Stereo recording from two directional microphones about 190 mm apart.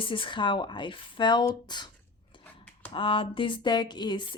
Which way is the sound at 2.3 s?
25° left (ahead or behind).